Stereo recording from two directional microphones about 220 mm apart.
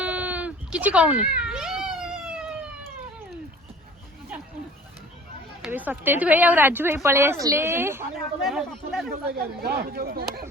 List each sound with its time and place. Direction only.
0.0 s cat: 5° right (ahead or behind)
5.6 s speech: 5° right (ahead or behind)
8.4 s speech: centre (ahead or behind)
9.0 s speech: 45° right (ahead or behind)